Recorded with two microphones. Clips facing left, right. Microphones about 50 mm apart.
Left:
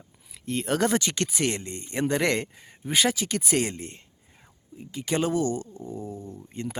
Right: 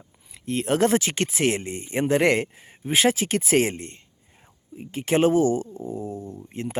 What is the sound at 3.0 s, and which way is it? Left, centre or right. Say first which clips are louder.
Speech: right 4 dB; right.